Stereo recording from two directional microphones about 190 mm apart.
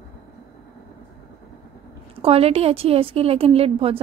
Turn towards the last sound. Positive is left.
turn(degrees=-30)  # may be behind; listen again after turning